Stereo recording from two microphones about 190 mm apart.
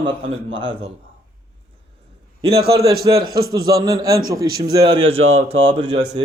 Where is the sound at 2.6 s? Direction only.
55° right (ahead or behind).